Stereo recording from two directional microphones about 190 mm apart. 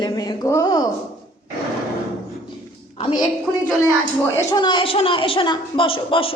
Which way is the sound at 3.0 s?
30° left (ahead or behind).